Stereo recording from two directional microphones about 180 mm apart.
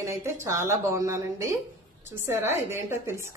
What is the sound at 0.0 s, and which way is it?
Speech, 15° right (ahead or behind).